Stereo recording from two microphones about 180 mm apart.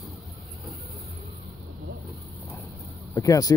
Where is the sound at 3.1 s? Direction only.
20° left (ahead or behind).